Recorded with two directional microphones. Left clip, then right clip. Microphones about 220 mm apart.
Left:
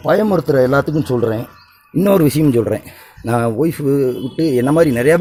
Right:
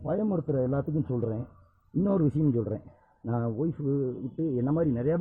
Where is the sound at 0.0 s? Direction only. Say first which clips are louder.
Left 16 dB; 40° left (ahead or behind).